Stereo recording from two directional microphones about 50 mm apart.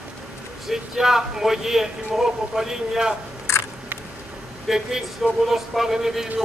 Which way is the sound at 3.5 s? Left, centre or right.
Left.